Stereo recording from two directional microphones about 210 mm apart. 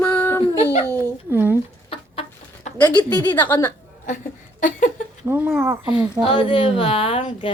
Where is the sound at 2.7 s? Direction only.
10° left (ahead or behind).